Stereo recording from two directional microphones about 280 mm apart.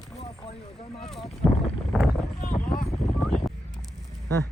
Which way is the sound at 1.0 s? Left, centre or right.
Centre.